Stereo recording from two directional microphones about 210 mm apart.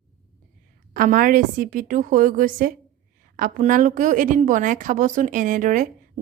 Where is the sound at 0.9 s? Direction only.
40° right (ahead or behind).